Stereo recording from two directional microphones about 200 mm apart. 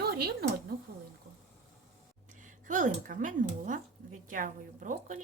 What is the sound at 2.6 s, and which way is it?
A woman's voice, 40° right (ahead or behind).